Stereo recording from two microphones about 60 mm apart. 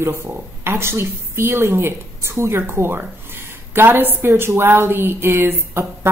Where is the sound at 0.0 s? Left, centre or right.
Right.